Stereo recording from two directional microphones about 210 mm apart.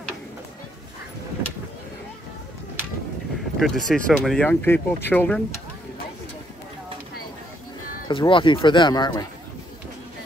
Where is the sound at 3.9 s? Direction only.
Centre (ahead or behind).